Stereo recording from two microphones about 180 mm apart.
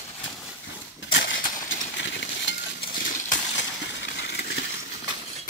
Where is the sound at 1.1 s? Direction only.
90° left.